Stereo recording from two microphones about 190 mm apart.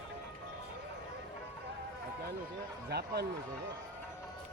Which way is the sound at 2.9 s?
60° right (ahead or behind).